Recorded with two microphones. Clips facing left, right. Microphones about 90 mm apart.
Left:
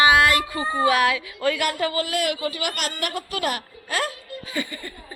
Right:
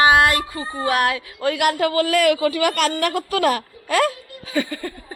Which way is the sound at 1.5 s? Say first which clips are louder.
Right 6 dB; 60° right (ahead or behind).